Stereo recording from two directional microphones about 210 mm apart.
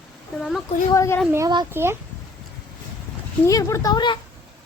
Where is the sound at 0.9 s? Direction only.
15° left (ahead or behind).